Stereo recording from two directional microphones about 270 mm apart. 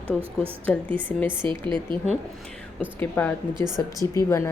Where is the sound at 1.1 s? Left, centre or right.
Centre.